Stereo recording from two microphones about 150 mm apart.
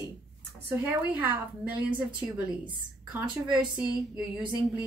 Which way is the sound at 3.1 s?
5° right (ahead or behind).